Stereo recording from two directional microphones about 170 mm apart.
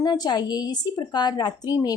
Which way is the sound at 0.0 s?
25° left (ahead or behind).